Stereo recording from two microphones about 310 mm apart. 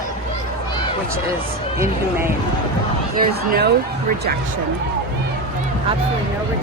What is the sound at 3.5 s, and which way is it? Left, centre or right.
Speech, right.